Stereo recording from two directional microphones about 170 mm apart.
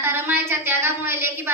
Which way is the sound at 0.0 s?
15° right (ahead or behind).